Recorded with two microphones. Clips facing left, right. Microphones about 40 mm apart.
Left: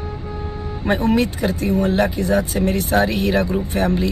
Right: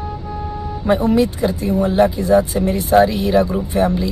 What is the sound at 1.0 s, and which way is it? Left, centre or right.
Speech, left.